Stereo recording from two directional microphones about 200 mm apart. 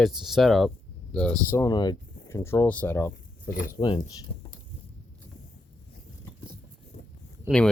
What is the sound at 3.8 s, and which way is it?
Speech, 20° left (ahead or behind).